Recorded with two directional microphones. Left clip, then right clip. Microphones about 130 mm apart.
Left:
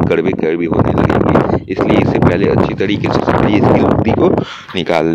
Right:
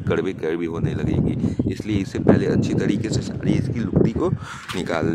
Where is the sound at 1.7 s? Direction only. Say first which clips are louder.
Left 13 dB; 40° left (ahead or behind).